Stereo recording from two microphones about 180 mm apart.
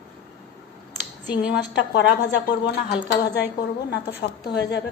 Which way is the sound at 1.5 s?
75° left (ahead or behind).